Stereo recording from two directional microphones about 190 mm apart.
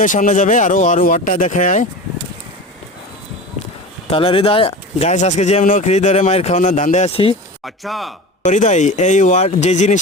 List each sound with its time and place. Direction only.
0.0 s speech: 45° left (ahead or behind)
4.1 s speech: 30° left (ahead or behind)
7.6 s speech: centre (ahead or behind)
8.4 s speech: 40° left (ahead or behind)